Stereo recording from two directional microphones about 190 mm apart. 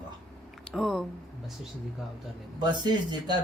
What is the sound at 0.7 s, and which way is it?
Speech, centre (ahead or behind).